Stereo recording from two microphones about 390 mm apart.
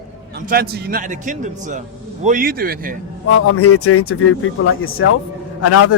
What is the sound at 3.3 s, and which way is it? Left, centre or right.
A man's voice, left.